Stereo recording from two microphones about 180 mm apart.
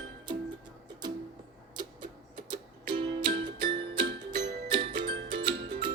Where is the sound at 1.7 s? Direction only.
25° right (ahead or behind).